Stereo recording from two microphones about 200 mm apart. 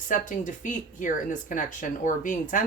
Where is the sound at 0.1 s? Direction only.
40° left (ahead or behind).